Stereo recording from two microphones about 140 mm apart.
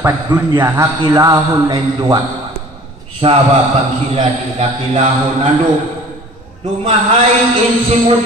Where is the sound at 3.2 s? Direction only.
40° right (ahead or behind).